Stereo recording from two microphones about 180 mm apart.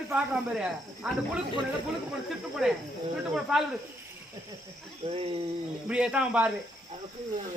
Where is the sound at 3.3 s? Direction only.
Centre (ahead or behind).